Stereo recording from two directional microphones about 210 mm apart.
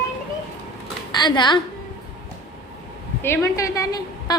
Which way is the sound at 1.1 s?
20° left (ahead or behind).